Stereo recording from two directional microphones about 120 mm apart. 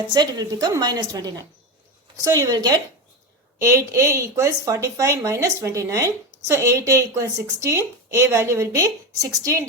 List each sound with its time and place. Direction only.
0.1 s a woman's voice: 35° right (ahead or behind)